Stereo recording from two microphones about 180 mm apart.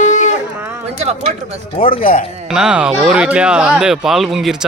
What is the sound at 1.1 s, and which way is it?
Speech, 35° right (ahead or behind).